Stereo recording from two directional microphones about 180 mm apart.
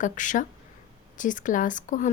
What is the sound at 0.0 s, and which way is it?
Speech, 45° left (ahead or behind).